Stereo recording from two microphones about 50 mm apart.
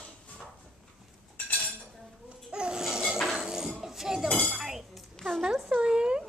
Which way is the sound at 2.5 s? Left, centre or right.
Centre.